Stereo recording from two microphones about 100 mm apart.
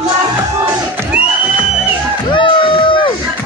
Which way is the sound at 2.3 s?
55° left (ahead or behind).